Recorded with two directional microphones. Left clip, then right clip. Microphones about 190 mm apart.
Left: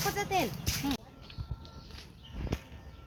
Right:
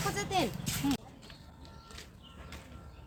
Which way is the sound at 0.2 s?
30° left (ahead or behind).